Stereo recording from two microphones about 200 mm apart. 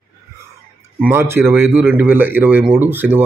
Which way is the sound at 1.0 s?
10° right (ahead or behind).